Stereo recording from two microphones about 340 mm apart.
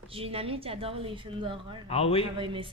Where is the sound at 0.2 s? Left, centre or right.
Centre.